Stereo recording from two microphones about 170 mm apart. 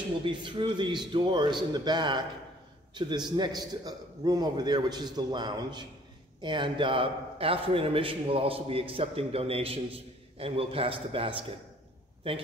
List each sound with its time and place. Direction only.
0.2 s a man's voice: 30° right (ahead or behind)